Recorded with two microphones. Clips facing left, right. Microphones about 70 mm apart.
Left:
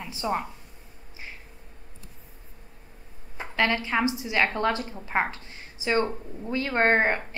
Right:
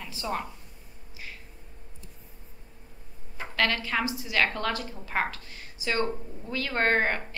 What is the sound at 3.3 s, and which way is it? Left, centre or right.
A woman's voice, left.